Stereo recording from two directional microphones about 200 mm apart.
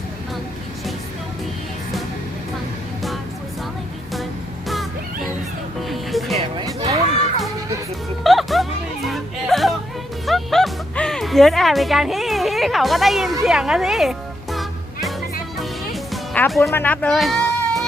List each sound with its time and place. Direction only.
5.9 s music: centre (ahead or behind)
6.3 s music: 30° right (ahead or behind)
8.2 s music: centre (ahead or behind)
16.7 s speech: 10° left (ahead or behind)